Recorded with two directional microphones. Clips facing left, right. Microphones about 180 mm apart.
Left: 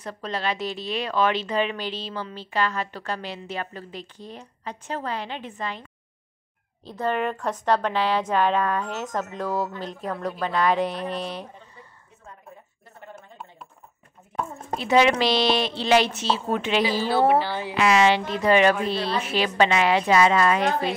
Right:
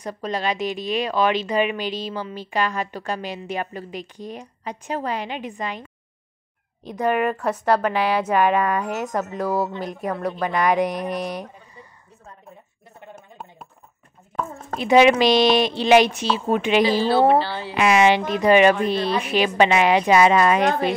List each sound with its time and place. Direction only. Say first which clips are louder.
0.0 s a woman's voice: right 3 dB; 15° right (ahead or behind)
14.8 s a woman's voice: right 5 dB; 15° right (ahead or behind)
17.3 s a woman's voice: right 2 dB; 15° left (ahead or behind)
17.7 s a woman's voice: right 3 dB; 15° right (ahead or behind)